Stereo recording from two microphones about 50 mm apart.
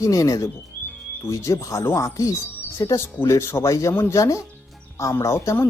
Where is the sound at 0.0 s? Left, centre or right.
Left.